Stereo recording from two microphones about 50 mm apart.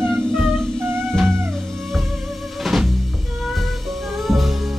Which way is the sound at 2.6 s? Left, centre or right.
Centre.